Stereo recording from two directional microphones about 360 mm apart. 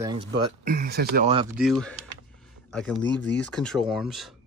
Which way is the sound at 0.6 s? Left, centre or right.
Right.